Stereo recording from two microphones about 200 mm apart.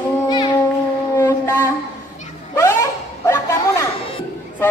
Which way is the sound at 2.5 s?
10° left (ahead or behind).